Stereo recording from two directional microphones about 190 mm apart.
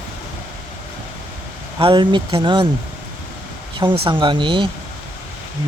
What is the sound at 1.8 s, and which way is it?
Speech, 25° right (ahead or behind).